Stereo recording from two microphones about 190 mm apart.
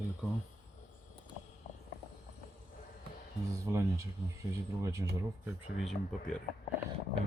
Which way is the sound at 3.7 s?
15° right (ahead or behind).